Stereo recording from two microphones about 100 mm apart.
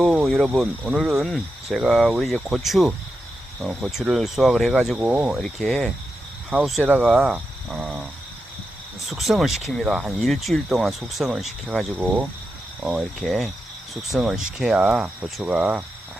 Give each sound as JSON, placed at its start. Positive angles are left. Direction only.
{"t": 0.0, "sound": "speech", "side_deg": -10}
{"t": 5.4, "sound": "speech", "side_deg": 5}
{"t": 7.0, "sound": "speech", "side_deg": -5}
{"t": 9.0, "sound": "speech", "side_deg": 0}
{"t": 11.9, "sound": "speech", "side_deg": -20}
{"t": 12.8, "sound": "speech", "side_deg": -5}